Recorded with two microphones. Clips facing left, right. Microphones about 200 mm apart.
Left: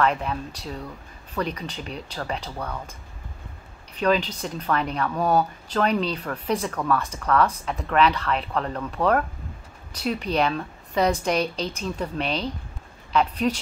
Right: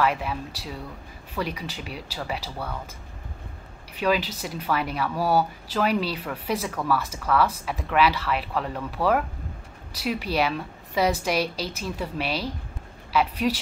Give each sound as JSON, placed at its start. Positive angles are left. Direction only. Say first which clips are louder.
{"t": 0.0, "sound": "speech", "louder": "left 1 dB", "side_deg": -5}
{"t": 3.9, "sound": "speech", "louder": "left 2 dB", "side_deg": -5}